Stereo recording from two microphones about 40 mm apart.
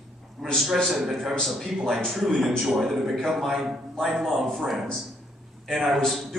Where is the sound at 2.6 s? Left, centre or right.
Centre.